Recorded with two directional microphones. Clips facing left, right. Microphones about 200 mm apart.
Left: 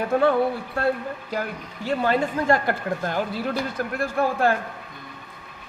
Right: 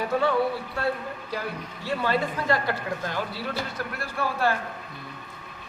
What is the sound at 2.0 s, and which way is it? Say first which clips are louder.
Speech: left 4 dB; 50° left (ahead or behind).